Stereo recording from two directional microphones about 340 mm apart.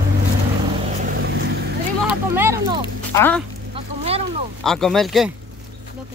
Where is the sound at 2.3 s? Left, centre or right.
Centre.